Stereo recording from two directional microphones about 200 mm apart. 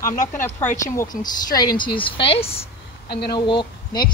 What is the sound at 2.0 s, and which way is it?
A woman's voice, 25° left (ahead or behind).